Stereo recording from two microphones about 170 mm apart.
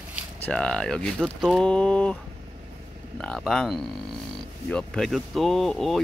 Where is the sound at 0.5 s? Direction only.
5° left (ahead or behind).